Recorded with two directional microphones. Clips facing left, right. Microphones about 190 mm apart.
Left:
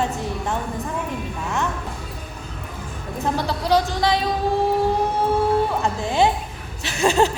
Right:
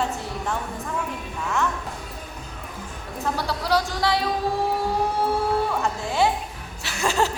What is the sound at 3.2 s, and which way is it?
Speech, 20° left (ahead or behind).